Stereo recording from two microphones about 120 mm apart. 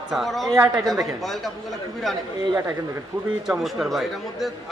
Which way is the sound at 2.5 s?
30° right (ahead or behind).